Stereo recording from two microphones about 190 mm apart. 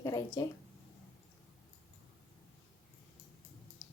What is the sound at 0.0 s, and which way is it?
Speech, 20° left (ahead or behind).